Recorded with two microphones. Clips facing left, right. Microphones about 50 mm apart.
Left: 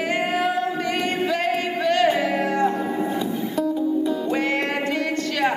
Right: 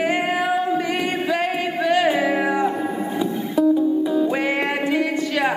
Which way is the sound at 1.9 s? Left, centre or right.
Centre.